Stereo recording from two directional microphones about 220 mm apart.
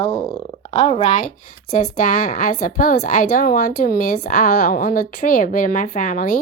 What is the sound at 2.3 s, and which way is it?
A woman's voice, 40° left (ahead or behind).